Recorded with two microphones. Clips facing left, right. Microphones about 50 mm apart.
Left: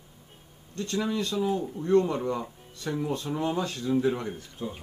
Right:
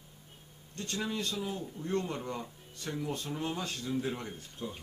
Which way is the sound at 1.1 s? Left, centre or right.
Left.